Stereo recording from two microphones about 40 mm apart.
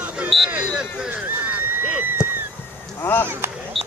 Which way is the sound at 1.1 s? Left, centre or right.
Right.